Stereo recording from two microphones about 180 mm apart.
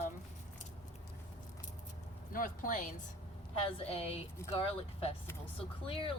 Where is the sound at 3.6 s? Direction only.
30° left (ahead or behind).